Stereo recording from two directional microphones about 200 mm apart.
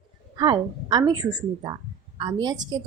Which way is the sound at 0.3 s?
20° right (ahead or behind).